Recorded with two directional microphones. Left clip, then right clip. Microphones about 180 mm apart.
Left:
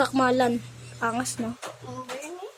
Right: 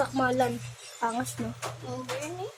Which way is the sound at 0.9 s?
15° left (ahead or behind).